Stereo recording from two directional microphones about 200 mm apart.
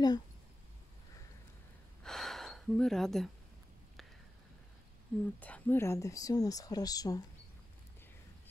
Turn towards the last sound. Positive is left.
turn(degrees=20)  # may be behind; listen again after turning